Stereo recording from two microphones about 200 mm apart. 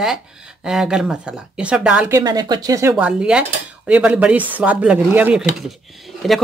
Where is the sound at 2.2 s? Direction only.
20° right (ahead or behind).